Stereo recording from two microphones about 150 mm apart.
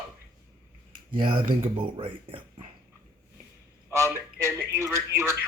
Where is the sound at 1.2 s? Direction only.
35° right (ahead or behind).